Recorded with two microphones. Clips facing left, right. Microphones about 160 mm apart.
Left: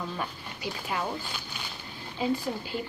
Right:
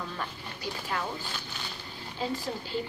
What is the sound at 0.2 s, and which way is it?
Speech, 15° left (ahead or behind).